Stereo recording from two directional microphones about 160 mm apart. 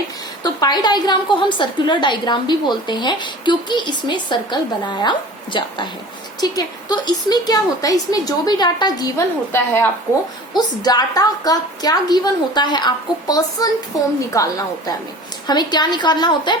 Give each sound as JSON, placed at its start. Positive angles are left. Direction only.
{"t": 0.4, "sound": "a woman's voice", "side_deg": 25}
{"t": 10.5, "sound": "a woman's voice", "side_deg": 25}